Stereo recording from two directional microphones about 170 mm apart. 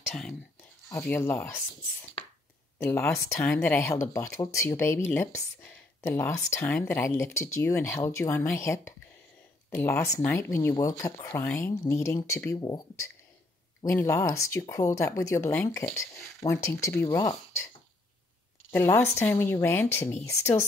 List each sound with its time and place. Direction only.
0.1 s speech: 5° left (ahead or behind); by 17.4 s 20° left (ahead or behind)
18.7 s speech: 15° left (ahead or behind)